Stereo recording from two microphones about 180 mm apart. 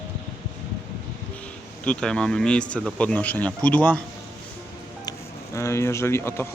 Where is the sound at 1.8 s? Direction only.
5° left (ahead or behind).